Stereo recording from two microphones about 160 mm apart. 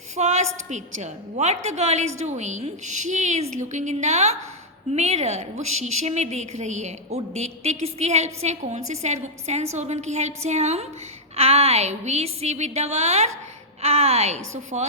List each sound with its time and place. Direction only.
0.2 s a woman's voice: 45° right (ahead or behind)